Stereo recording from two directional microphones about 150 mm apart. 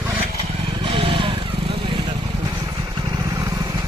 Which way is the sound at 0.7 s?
35° right (ahead or behind).